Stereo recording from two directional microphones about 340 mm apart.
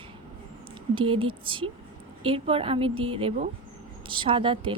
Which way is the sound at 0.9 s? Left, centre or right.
Centre.